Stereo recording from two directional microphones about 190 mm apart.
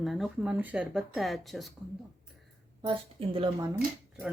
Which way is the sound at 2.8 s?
30° right (ahead or behind).